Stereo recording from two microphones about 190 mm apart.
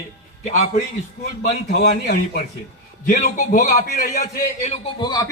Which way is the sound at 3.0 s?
40° left (ahead or behind).